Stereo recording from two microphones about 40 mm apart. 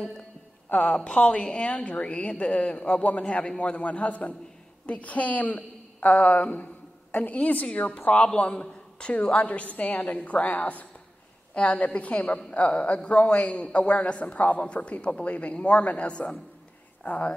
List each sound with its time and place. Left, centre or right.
0.7 s a woman's voice: left
0.9 s a woman's voice: left
3.0 s a woman's voice: left
3.3 s a woman's voice: left
8.1 s a woman's voice: left
9.4 s a woman's voice: left
17.0 s speech: left